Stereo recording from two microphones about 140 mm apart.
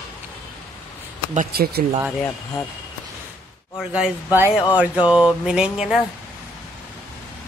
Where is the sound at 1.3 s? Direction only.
90° right.